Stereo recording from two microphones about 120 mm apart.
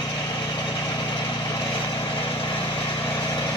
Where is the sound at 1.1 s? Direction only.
35° left (ahead or behind).